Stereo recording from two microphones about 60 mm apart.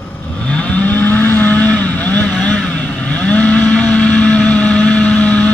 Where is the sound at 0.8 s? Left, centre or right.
Left.